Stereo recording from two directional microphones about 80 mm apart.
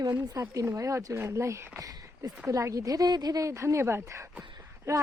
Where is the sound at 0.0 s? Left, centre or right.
Right.